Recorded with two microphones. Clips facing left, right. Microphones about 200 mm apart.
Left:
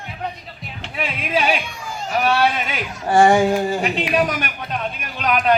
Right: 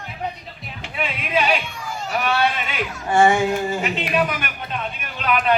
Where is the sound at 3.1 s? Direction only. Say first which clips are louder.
Left 3 dB; 35° left (ahead or behind).